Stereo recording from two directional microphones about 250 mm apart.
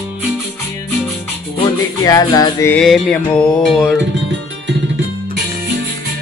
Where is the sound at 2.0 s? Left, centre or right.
Centre.